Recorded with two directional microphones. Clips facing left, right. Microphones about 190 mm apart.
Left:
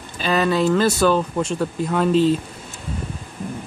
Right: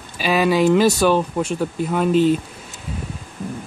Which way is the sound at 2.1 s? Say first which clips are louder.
Right 1 dB; 30° left (ahead or behind).